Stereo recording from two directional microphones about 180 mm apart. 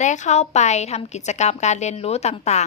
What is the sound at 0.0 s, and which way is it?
A woman's voice, 40° left (ahead or behind).